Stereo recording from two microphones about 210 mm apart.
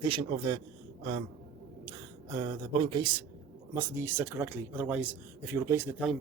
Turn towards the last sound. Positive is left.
turn(degrees=-10)  # may be behind; listen again after turning